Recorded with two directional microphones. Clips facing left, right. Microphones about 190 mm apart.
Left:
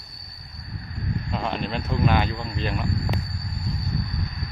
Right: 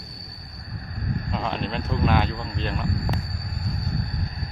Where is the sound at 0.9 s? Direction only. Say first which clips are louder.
Even; 45° right (ahead or behind).